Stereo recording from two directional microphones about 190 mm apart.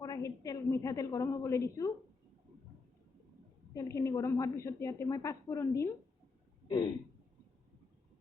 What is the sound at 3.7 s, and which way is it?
A woman's voice, 15° left (ahead or behind).